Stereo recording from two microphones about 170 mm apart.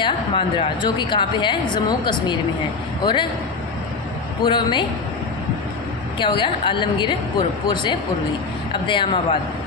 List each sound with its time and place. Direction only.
0.0 s a woman's voice: 30° left (ahead or behind)
4.4 s a woman's voice: 25° left (ahead or behind)
6.1 s a woman's voice: 30° left (ahead or behind)